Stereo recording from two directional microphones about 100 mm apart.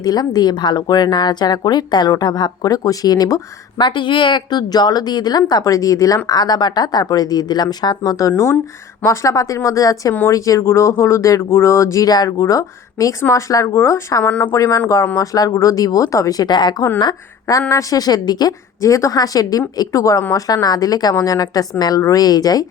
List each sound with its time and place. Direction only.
0.0 s a woman's voice: 40° left (ahead or behind)
3.8 s a woman's voice: 50° left (ahead or behind)
8.3 s speech: 25° left (ahead or behind)
14.3 s speech: 15° left (ahead or behind)
14.5 s speech: 35° left (ahead or behind)
16.5 s a woman's voice: 45° left (ahead or behind)